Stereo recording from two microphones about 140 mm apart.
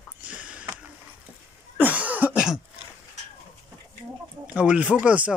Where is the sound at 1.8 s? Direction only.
10° right (ahead or behind).